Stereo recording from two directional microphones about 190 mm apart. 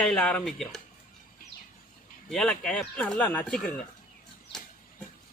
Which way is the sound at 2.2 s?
Centre (ahead or behind).